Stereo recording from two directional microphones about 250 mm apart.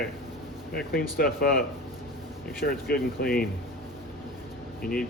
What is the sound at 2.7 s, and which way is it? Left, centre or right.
Speech, left.